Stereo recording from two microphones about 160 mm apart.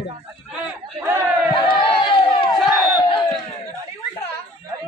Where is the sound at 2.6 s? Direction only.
Centre (ahead or behind).